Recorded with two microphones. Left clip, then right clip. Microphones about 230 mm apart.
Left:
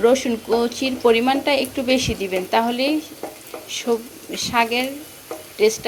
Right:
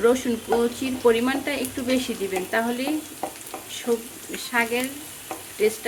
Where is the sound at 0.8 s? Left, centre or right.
Centre.